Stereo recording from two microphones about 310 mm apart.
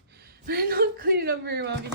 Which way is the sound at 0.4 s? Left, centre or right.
Right.